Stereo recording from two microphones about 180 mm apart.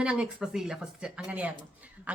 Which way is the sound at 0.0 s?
5° right (ahead or behind).